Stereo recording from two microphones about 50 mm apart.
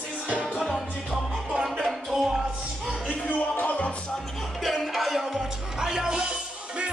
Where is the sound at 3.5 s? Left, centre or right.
Left.